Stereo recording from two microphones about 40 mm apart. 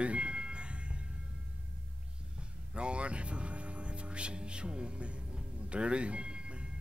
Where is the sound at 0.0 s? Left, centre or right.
Right.